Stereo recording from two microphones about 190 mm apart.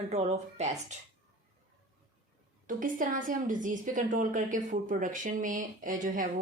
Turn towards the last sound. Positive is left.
turn(degrees=-45)  # may be behind; listen again after turning